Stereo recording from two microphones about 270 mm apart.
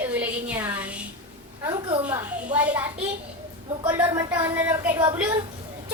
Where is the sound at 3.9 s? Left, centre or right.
Centre.